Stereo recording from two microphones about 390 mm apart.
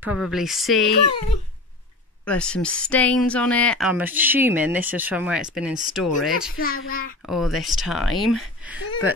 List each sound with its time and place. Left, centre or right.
0.0 s speech: centre
2.2 s speech: centre
6.5 s a child's voice: left
7.2 s speech: centre